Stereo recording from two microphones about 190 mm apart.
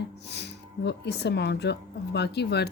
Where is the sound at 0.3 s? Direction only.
60° left (ahead or behind).